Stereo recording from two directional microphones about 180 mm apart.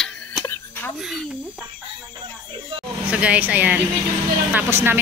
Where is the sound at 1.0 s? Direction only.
Centre (ahead or behind).